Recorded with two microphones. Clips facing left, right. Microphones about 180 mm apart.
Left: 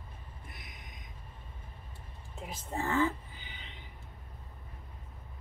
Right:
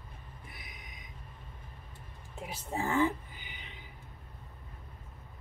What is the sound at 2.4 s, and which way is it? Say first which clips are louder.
Speech: right 1 dB; 5° right (ahead or behind).